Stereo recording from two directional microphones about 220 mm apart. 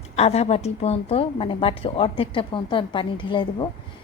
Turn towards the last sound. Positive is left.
turn(degrees=20)  # may be behind; listen again after turning